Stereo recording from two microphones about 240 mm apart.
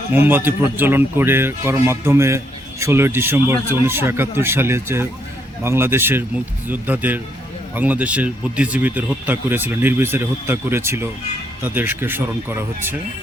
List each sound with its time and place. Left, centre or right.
0.1 s speech: centre